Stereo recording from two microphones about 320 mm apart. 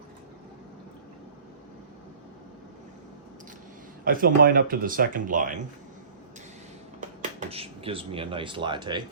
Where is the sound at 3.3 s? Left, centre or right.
Right.